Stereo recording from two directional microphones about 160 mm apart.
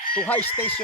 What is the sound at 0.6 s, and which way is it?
Speech, 10° left (ahead or behind).